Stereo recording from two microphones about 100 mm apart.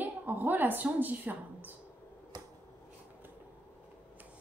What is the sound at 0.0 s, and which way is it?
A woman's voice, 20° right (ahead or behind).